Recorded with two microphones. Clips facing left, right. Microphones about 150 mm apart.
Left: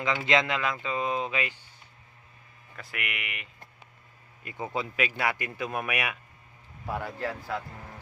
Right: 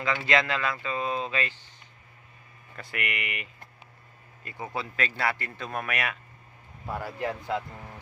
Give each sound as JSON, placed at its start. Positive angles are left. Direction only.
{"t": 0.0, "sound": "speech", "side_deg": 20}
{"t": 2.7, "sound": "speech", "side_deg": 0}
{"t": 4.4, "sound": "speech", "side_deg": 20}
{"t": 6.8, "sound": "speech", "side_deg": 0}
{"t": 7.2, "sound": "speech", "side_deg": -20}